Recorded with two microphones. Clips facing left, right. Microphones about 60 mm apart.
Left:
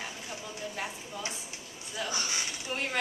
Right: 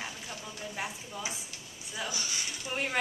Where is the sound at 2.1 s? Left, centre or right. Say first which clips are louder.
Left 4 dB; left.